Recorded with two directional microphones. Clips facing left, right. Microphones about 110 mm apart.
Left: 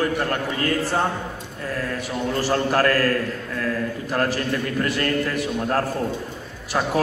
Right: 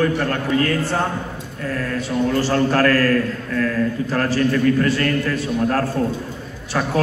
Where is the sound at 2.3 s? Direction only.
15° left (ahead or behind).